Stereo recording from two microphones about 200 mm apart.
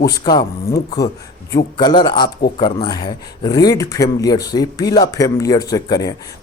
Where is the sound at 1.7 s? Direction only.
20° left (ahead or behind).